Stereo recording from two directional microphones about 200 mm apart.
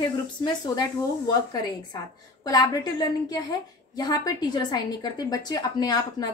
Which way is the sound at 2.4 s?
20° left (ahead or behind).